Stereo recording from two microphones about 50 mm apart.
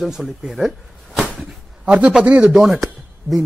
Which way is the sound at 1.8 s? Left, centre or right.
Right.